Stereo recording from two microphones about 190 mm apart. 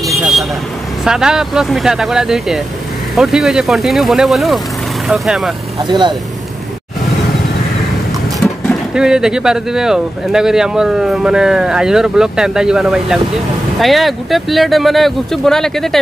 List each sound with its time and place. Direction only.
0.2 s vehicle: centre (ahead or behind)
1.0 s speech: 5° right (ahead or behind)
5.9 s speech: 25° right (ahead or behind)
8.6 s speech: 5° right (ahead or behind)